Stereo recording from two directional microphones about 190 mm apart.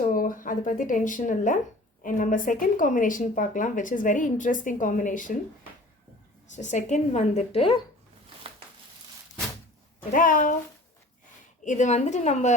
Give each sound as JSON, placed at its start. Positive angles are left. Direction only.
{"t": 0.1, "sound": "speech", "side_deg": 45}
{"t": 6.5, "sound": "a woman's voice", "side_deg": 40}
{"t": 10.1, "sound": "speech", "side_deg": 45}
{"t": 11.6, "sound": "a woman's voice", "side_deg": 40}